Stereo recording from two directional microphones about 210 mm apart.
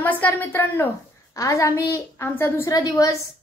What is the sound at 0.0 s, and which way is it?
A child's voice, 10° left (ahead or behind).